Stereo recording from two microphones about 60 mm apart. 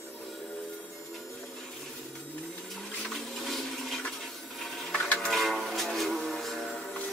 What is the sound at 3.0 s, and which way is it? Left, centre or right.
Toilet flush, centre.